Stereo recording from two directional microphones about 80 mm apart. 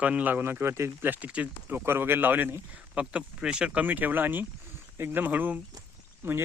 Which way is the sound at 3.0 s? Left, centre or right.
Centre.